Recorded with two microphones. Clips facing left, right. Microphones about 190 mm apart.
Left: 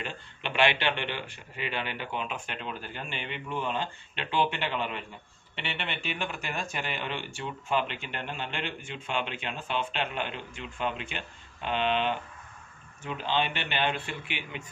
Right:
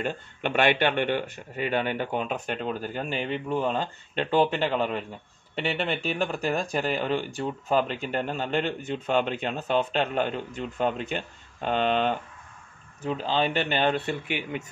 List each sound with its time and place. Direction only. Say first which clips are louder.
0.0 s a man's voice: right 8 dB; 45° right (ahead or behind)